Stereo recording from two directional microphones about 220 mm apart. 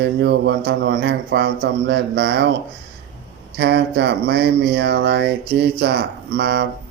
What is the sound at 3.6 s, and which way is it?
Speech, 50° right (ahead or behind).